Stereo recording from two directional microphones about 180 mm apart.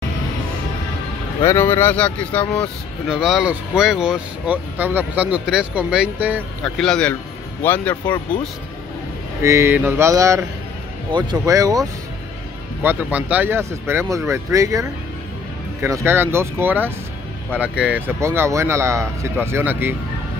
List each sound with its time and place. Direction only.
1.4 s speech: 15° left (ahead or behind); by 6.4 s 10° right (ahead or behind)
6.6 s speech: 5° left (ahead or behind)
9.4 s speech: 15° right (ahead or behind)
12.8 s speech: 10° right (ahead or behind)